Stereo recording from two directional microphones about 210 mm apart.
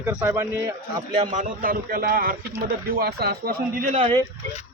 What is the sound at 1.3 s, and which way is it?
Speech, 35° right (ahead or behind).